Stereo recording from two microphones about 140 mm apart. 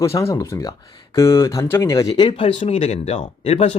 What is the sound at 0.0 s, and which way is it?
Speech, 20° left (ahead or behind).